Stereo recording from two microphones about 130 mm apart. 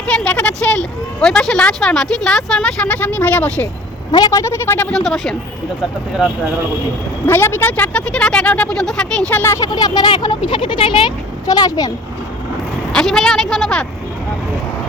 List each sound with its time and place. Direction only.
0.0 s speech: 10° left (ahead or behind)
4.1 s speech: 30° left (ahead or behind)
4.9 s a woman's voice: centre (ahead or behind)
7.3 s speech: 15° left (ahead or behind)
9.4 s speech: 20° left (ahead or behind)
9.7 s speech: 30° left (ahead or behind)
12.9 s a woman's voice: 5° left (ahead or behind)